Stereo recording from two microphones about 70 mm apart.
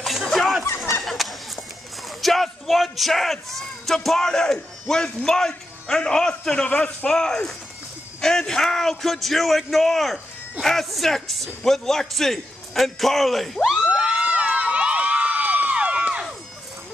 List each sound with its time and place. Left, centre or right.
0.0 s a sound: centre
2.2 s speech: centre
13.8 s crowd: centre